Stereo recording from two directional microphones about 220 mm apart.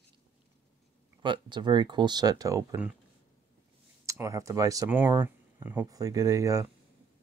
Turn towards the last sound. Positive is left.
turn(degrees=-15)  # may be behind; listen again after turning